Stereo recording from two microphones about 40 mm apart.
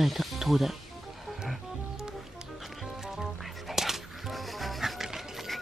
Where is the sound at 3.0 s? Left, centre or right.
Centre.